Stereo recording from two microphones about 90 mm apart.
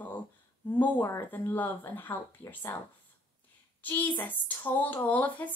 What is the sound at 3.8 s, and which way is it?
Speech, 20° left (ahead or behind).